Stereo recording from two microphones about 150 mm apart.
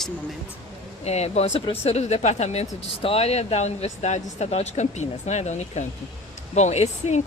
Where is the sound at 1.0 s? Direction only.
45° left (ahead or behind).